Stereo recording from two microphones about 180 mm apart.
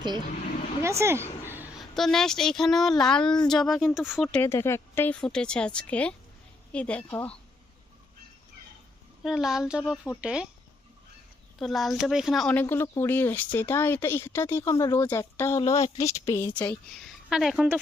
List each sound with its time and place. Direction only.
0.8 s speech: 15° right (ahead or behind)
1.5 s a sound: 10° right (ahead or behind)
1.8 s speech: centre (ahead or behind)
9.2 s speech: centre (ahead or behind)
11.6 s speech: centre (ahead or behind)
16.9 s speech: centre (ahead or behind)